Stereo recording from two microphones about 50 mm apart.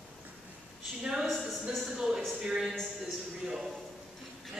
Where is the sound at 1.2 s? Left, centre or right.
Centre.